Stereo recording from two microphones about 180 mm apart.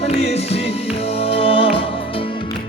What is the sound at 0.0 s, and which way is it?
Music, 35° left (ahead or behind).